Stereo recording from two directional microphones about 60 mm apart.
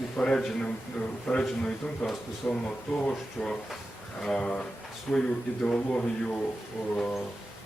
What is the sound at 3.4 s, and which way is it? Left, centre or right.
A man's voice, centre.